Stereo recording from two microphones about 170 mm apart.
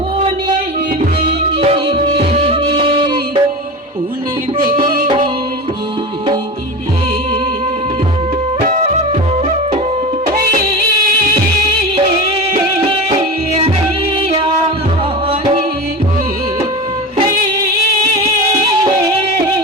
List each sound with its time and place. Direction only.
1.6 s music: 35° right (ahead or behind)
4.6 s music: 55° right (ahead or behind)
5.0 s music: 30° right (ahead or behind)
8.6 s music: 40° right (ahead or behind)
12.9 s music: 35° right (ahead or behind)